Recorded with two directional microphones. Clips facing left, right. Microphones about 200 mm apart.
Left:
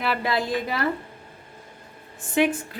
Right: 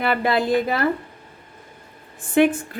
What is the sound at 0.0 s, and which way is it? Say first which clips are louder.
Speech: right 5 dB; 55° right (ahead or behind).